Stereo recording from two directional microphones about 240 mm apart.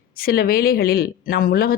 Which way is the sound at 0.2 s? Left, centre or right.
Left.